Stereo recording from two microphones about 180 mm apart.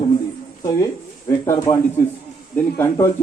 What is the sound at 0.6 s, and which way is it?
Speech, 20° left (ahead or behind).